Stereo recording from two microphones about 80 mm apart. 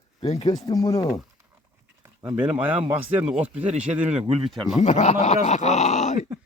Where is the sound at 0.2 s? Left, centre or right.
Left.